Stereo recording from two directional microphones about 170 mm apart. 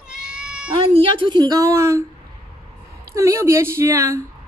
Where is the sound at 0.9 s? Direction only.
30° right (ahead or behind).